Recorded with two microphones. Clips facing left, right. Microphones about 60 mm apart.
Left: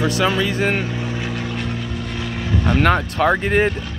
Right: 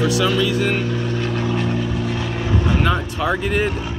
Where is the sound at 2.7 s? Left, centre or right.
Left.